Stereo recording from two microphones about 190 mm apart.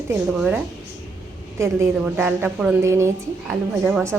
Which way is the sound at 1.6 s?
10° right (ahead or behind).